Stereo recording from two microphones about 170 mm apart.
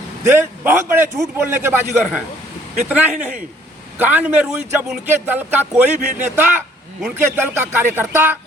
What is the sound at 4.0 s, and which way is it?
A man's voice, 10° right (ahead or behind).